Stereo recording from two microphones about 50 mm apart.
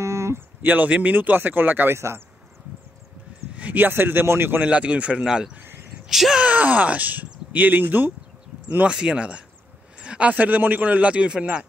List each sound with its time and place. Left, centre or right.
0.0 s a sound: right
0.6 s speech: right
2.0 s speech: right
3.5 s a sound: right
3.8 s speech: right
4.6 s a man's voice: right
5.6 s a sound: right
6.0 s speech: centre
6.4 s speech: right
8.9 s a man's voice: right